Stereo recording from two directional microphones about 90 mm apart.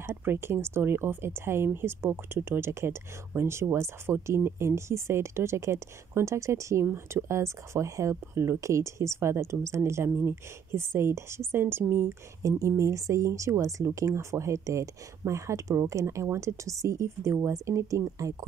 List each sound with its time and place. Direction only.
0.0 s speech: 25° right (ahead or behind)